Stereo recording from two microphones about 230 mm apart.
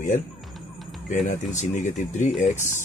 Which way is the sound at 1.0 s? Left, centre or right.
Left.